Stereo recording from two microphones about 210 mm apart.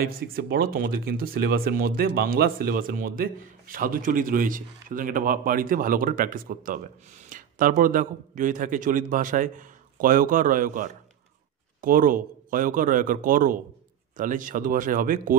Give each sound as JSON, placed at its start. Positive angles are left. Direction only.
{"t": 0.0, "sound": "a man's voice", "side_deg": -45}